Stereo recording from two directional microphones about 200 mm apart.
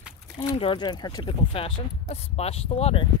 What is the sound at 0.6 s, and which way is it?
Speech, 25° left (ahead or behind).